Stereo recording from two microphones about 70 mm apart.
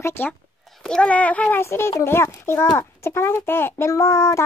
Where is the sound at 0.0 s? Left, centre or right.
Left.